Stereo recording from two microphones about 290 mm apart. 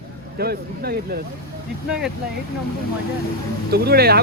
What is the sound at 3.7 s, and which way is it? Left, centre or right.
Speech, right.